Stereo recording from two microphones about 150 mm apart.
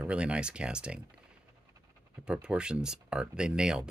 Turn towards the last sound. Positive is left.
turn(degrees=-5)  # may be behind; listen again after turning